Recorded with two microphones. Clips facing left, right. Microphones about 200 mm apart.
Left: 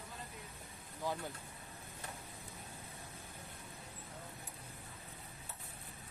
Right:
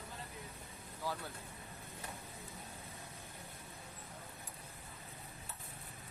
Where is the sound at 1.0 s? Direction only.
20° left (ahead or behind).